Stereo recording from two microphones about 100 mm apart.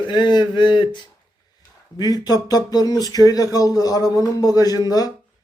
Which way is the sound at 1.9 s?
40° left (ahead or behind).